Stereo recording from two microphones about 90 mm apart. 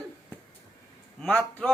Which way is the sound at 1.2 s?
10° left (ahead or behind).